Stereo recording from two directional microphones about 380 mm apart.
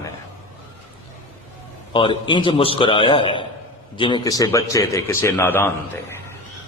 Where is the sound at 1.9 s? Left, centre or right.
Centre.